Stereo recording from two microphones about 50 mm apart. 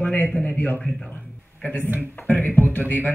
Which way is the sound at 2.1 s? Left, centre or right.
Left.